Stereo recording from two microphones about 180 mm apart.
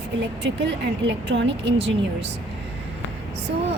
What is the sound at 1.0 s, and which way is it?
Speech, 90° right.